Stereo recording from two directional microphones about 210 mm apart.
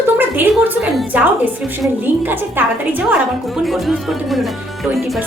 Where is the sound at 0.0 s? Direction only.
10° right (ahead or behind).